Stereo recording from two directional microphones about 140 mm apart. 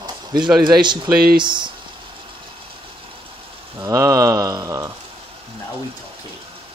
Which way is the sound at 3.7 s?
20° right (ahead or behind).